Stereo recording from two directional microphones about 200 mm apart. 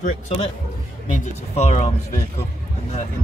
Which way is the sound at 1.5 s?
35° left (ahead or behind).